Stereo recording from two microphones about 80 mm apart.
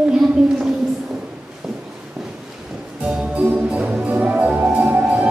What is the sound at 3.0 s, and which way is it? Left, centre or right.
Music, centre.